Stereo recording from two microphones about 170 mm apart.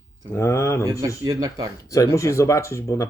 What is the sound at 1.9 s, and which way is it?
Speech, 20° left (ahead or behind).